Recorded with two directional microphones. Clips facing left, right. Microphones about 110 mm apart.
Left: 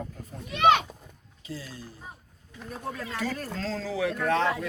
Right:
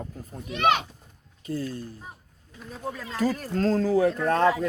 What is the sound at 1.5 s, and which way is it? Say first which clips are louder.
Speech: right 9 dB; 50° right (ahead or behind).